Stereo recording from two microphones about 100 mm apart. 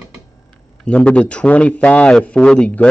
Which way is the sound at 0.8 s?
10° left (ahead or behind).